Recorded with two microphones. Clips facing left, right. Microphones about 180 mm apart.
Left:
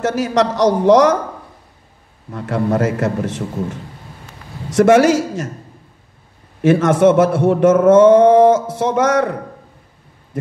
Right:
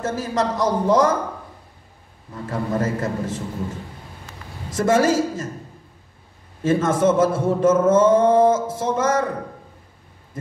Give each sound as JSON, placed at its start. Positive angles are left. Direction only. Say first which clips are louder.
{"t": 0.0, "sound": "a man's voice", "louder": "left 6 dB", "side_deg": 80}
{"t": 2.3, "sound": "a man's voice", "louder": "left 6 dB", "side_deg": 75}
{"t": 4.6, "sound": "a man's voice", "louder": "left 7 dB", "side_deg": 75}
{"t": 6.6, "sound": "a man's voice", "louder": "left 6 dB", "side_deg": 70}